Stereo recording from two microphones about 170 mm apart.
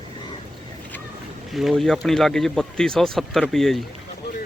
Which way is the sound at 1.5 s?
Centre (ahead or behind).